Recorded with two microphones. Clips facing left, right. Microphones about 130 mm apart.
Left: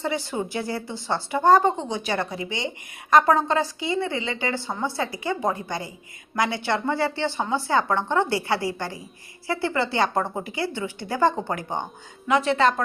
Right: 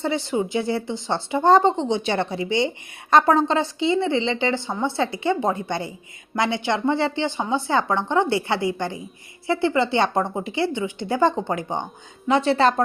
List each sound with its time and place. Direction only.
0.0 s a woman's voice: 25° right (ahead or behind)
12.3 s speech: 30° right (ahead or behind)